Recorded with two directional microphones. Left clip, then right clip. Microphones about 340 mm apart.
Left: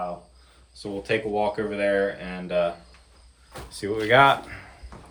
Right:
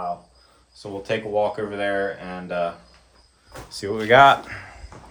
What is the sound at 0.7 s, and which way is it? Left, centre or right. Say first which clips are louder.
Speech: even; centre.